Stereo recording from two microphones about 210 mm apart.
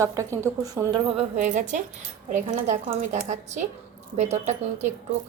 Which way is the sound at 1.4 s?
35° right (ahead or behind).